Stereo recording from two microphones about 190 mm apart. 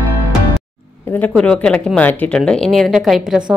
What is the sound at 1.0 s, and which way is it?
Speech, 10° left (ahead or behind).